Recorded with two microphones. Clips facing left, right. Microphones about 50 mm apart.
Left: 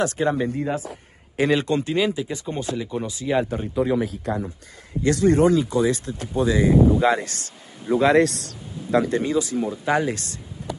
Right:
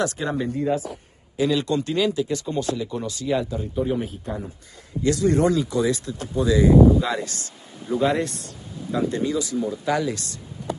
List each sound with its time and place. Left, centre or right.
0.0 s speech: left; by 3.3 s centre
3.7 s speech: left
5.0 s speech: left
7.9 s speech: left
9.1 s speech: left